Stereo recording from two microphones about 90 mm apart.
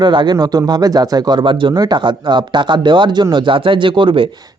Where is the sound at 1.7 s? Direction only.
50° right (ahead or behind); by 4.2 s 65° right (ahead or behind).